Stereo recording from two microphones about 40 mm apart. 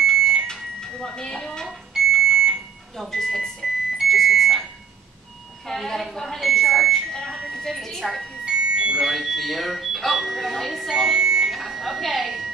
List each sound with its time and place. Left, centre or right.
0.0 s smoke detector: centre
0.5 s microwave oven: centre
1.7 s smoke detector: centre
3.1 s a woman's voice: centre
4.1 s smoke detector: centre
5.7 s a woman's voice: centre
7.1 s a woman's voice: centre
8.5 s fire alarm: centre
9.0 s speech: centre
10.9 s speech: centre
11.5 s music: centre